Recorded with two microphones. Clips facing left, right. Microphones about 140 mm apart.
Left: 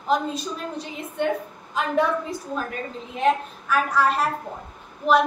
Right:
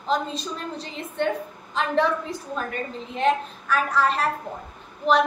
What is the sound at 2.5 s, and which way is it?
A woman's voice, 5° left (ahead or behind).